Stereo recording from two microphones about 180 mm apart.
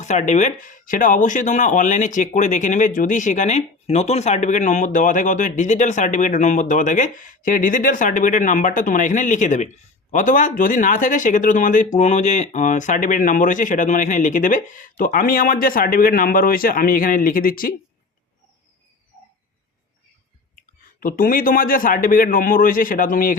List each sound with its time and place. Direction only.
0.0 s speech: 40° left (ahead or behind)
21.0 s speech: 50° left (ahead or behind)